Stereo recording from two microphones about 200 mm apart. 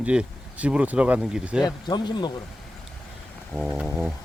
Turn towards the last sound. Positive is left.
turn(degrees=-5)  # may be behind; listen again after turning